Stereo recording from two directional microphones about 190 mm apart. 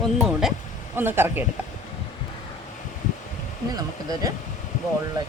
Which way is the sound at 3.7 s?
20° right (ahead or behind).